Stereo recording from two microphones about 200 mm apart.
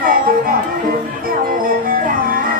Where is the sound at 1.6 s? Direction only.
45° right (ahead or behind).